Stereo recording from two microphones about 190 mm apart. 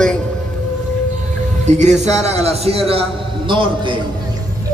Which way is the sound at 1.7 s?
40° right (ahead or behind).